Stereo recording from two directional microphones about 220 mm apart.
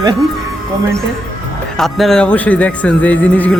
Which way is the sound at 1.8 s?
Centre (ahead or behind).